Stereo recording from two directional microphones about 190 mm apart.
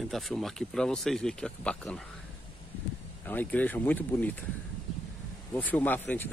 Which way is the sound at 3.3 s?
10° left (ahead or behind).